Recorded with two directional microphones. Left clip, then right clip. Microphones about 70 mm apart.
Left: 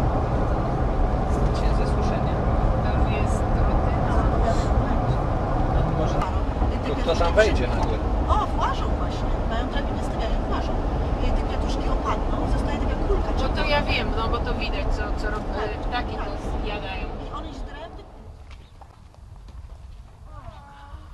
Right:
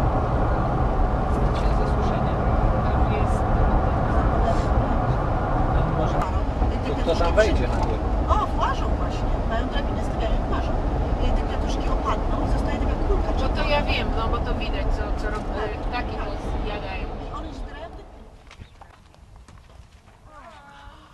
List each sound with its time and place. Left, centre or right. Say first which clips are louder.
0.0 s vehicle: right 1 dB; centre
1.5 s vehicle: right 1 dB; centre
2.0 s vehicle: right 1 dB; right
3.3 s vehicle: right 2 dB; centre
4.2 s a sound: right 1 dB; centre
4.5 s a sound: right 1 dB; right
4.7 s vehicle: right 1 dB; centre
6.1 s vehicle: right 1 dB; centre
7.2 s speech: left 1 dB; centre
7.6 s vehicle: even; centre
13.6 s speech: left 1 dB; centre
16.6 s vehicle: left 1 dB; centre